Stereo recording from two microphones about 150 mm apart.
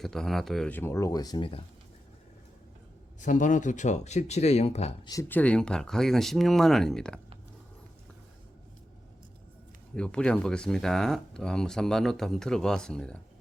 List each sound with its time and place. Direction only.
0.0 s speech: centre (ahead or behind)
0.7 s speech: 15° left (ahead or behind); by 1.6 s 35° left (ahead or behind)
3.2 s speech: 55° left (ahead or behind)
5.3 s speech: 10° left (ahead or behind)
9.9 s speech: 5° left (ahead or behind)